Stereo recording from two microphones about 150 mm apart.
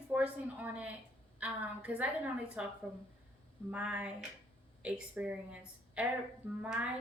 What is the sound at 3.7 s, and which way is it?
A woman's voice, 10° right (ahead or behind).